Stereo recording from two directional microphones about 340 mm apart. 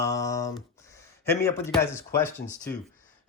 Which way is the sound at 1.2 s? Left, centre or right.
Centre.